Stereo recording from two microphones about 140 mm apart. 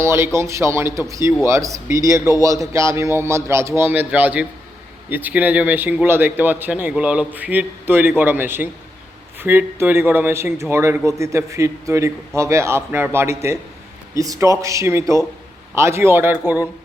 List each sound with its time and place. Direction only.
0.0 s a man's voice: 20° right (ahead or behind)